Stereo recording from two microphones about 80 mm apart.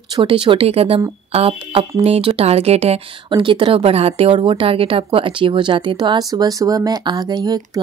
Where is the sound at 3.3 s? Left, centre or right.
Right.